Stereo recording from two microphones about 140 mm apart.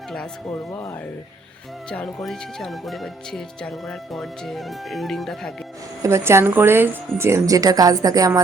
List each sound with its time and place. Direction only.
0.7 s speech: 20° left (ahead or behind)
1.9 s speech: 5° left (ahead or behind)
6.0 s speech: 20° right (ahead or behind)